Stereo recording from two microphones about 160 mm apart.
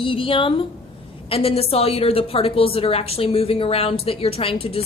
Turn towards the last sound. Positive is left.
turn(degrees=35)  # may be behind; listen again after turning